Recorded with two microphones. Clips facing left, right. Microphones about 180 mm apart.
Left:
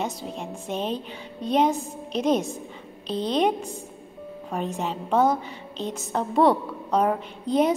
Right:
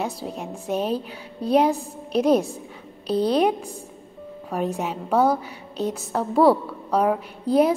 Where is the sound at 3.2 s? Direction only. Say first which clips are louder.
Right 3 dB; 10° right (ahead or behind).